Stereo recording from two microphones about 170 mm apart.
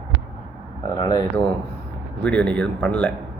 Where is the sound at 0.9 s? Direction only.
25° left (ahead or behind).